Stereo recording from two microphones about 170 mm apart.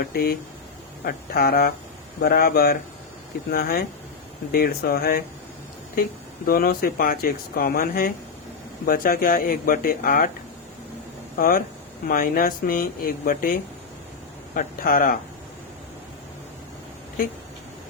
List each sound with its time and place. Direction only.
0.0 s speech: 65° left (ahead or behind)
11.3 s speech: 60° left (ahead or behind)